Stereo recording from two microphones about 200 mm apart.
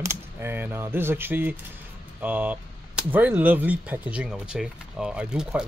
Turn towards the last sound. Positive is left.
turn(degrees=-5)  # may be behind; listen again after turning